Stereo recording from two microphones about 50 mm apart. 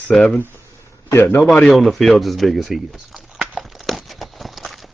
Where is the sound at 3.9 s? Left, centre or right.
Centre.